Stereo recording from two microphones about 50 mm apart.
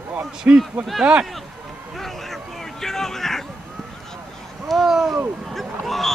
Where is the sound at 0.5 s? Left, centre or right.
Right.